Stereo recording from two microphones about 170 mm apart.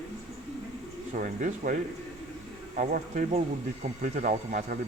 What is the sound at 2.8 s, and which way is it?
Speech, 50° right (ahead or behind).